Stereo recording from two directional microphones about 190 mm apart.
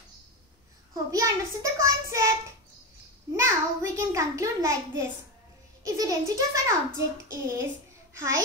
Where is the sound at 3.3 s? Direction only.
15° right (ahead or behind).